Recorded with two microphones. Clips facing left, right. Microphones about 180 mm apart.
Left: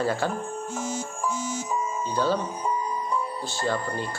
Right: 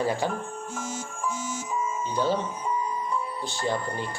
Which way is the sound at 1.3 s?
35° left (ahead or behind).